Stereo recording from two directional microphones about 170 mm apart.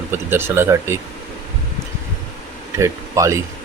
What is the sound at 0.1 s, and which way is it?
Speech, 15° right (ahead or behind).